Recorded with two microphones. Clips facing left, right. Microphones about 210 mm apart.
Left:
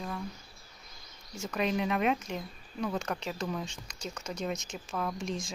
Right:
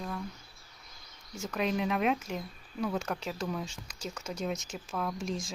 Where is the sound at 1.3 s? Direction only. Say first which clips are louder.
Even; centre (ahead or behind).